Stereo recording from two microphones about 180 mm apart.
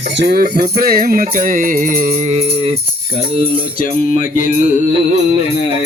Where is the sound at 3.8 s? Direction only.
50° left (ahead or behind).